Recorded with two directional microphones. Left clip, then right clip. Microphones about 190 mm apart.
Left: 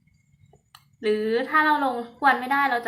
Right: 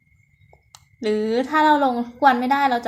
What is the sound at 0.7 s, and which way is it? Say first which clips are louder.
A woman's voice: right 1 dB; 40° right (ahead or behind).